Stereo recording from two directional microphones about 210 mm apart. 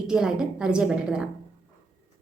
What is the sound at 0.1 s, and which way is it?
A woman's voice, 5° right (ahead or behind).